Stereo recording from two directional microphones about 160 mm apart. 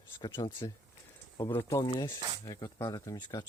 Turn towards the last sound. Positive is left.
turn(degrees=25)  # may be behind; listen again after turning